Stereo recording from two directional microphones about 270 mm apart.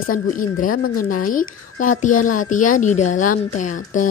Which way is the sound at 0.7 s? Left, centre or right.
Left.